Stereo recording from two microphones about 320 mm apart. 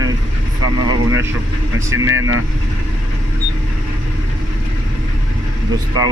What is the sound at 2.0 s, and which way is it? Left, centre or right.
Speech, right.